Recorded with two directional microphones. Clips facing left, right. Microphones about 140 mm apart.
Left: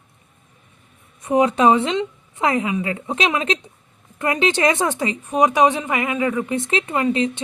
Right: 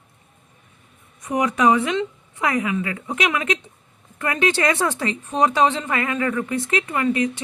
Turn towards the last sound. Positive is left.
turn(degrees=20)  # may be behind; listen again after turning